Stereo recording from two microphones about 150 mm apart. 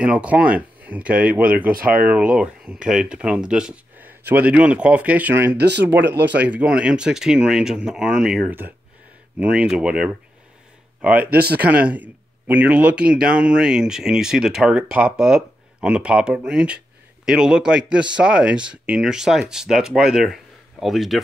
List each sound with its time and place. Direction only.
0.0 s speech: 5° right (ahead or behind)
11.2 s speech: 90° right
11.7 s speech: 10° right (ahead or behind)